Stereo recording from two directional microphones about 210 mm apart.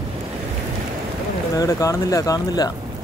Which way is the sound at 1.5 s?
15° left (ahead or behind).